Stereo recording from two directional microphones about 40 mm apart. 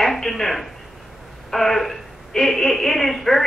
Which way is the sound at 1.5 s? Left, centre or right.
Centre.